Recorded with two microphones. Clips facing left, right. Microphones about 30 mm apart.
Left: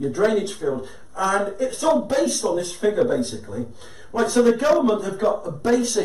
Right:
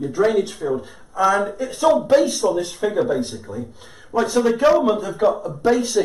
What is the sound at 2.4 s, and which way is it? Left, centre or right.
Speech, centre.